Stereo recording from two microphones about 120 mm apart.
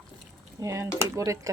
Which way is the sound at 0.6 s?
25° right (ahead or behind).